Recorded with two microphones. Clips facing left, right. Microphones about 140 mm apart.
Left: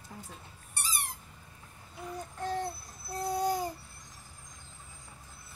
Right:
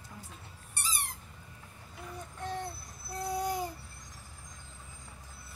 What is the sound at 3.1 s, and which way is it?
Babbling, 35° left (ahead or behind).